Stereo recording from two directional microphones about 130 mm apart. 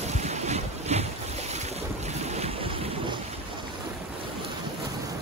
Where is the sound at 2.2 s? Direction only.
55° right (ahead or behind).